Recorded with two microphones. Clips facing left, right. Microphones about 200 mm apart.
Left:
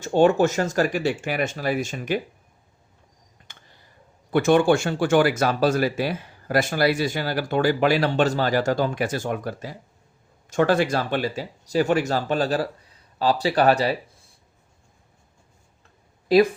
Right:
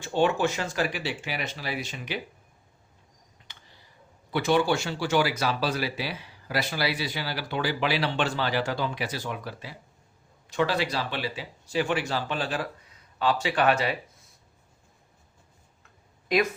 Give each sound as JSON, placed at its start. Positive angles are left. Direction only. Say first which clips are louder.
{"t": 0.0, "sound": "speech", "louder": "left 7 dB", "side_deg": 45}
{"t": 3.5, "sound": "a sound", "louder": "left 2 dB", "side_deg": 50}
{"t": 4.3, "sound": "speech", "louder": "left 6 dB", "side_deg": 50}
{"t": 16.3, "sound": "speech", "louder": "left 8 dB", "side_deg": 35}